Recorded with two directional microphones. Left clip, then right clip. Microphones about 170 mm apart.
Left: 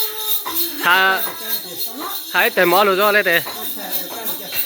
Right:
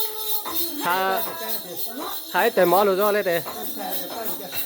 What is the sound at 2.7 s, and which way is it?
Speech, 5° right (ahead or behind).